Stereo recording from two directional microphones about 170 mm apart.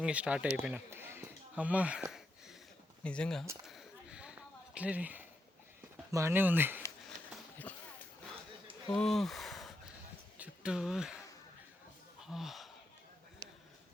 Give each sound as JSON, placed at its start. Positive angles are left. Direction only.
{"t": 0.0, "sound": "speech", "side_deg": -5}
{"t": 3.0, "sound": "speech", "side_deg": 5}
{"t": 3.7, "sound": "a sound", "side_deg": -5}
{"t": 6.1, "sound": "speech", "side_deg": -15}
{"t": 8.9, "sound": "speech", "side_deg": 0}
{"t": 10.3, "sound": "a sound", "side_deg": -5}
{"t": 12.2, "sound": "gasp", "side_deg": 0}